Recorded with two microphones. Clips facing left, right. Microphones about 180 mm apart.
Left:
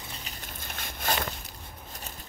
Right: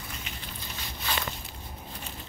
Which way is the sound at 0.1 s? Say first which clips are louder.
Right 1 dB; 40° left (ahead or behind).